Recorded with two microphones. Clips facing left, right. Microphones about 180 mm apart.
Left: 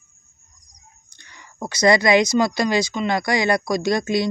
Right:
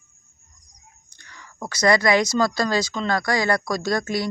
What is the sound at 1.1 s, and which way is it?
Speech, 25° left (ahead or behind).